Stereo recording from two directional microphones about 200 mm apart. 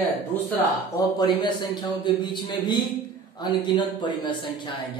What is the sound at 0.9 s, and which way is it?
Speech, 20° left (ahead or behind).